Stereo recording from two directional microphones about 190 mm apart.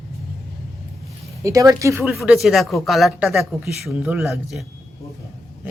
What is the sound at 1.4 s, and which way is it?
Speech, 15° right (ahead or behind).